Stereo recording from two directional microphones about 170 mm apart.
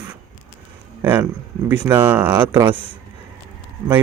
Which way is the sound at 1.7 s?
10° right (ahead or behind).